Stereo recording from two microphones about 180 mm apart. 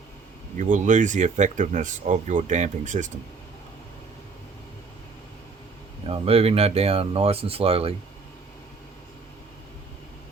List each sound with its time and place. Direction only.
0.6 s speech: 45° right (ahead or behind)
6.1 s speech: 35° right (ahead or behind)